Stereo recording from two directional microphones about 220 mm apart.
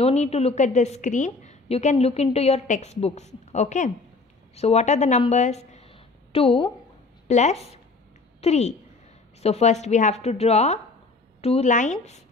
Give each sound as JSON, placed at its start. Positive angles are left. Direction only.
{"t": 0.0, "sound": "a woman's voice", "side_deg": 30}